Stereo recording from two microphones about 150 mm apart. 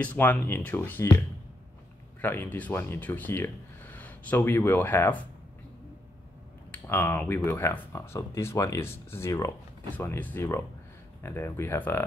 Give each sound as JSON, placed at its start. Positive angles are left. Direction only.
{"t": 0.0, "sound": "speech", "side_deg": 10}
{"t": 2.2, "sound": "speech", "side_deg": 15}
{"t": 6.7, "sound": "speech", "side_deg": 15}